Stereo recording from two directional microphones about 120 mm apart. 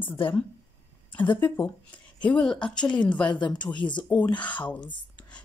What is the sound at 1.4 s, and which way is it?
Speech, 40° left (ahead or behind).